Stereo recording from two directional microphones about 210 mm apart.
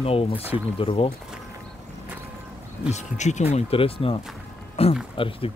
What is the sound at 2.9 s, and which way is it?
Speech, 35° left (ahead or behind).